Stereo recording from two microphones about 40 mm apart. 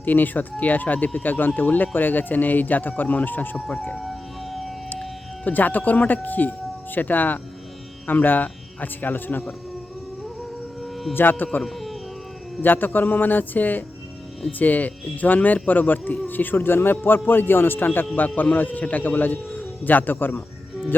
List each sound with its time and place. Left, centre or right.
0.0 s speech: left
4.0 s music: centre
5.5 s speech: left
11.1 s a man's voice: left
11.6 s speech: centre
12.6 s a man's voice: left
18.5 s speech: left